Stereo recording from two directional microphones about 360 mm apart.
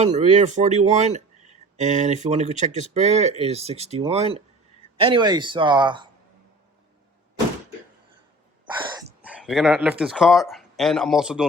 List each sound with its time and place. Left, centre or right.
0.0 s speech: centre
9.2 s speech: centre